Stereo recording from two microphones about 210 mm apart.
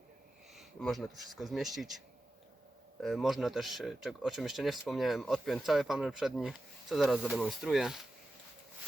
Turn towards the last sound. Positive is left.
turn(degrees=0)  # may be behind; listen again after turning